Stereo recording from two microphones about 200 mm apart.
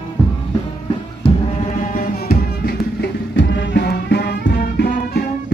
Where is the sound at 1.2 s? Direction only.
30° left (ahead or behind).